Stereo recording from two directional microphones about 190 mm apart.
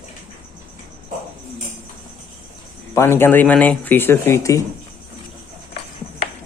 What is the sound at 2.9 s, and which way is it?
Speech, 15° left (ahead or behind).